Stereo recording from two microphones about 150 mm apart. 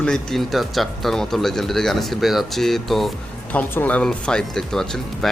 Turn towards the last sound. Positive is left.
turn(degrees=5)  # may be behind; listen again after turning